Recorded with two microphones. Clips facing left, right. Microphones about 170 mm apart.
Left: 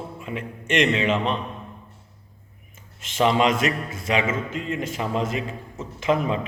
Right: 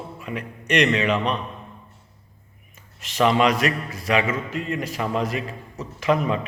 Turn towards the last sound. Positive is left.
turn(degrees=25)  # may be behind; listen again after turning